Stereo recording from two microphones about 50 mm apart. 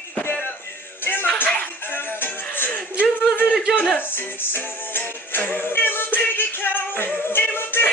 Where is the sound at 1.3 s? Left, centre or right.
Left.